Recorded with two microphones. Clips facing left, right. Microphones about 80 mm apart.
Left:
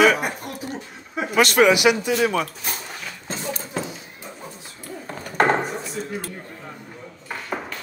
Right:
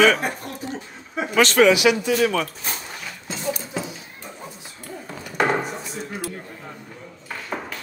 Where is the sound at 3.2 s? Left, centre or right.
Left.